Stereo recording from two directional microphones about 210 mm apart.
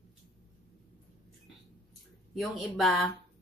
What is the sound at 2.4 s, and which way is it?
Speech, centre (ahead or behind).